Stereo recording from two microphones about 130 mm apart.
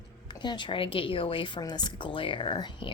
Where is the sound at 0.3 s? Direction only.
35° left (ahead or behind).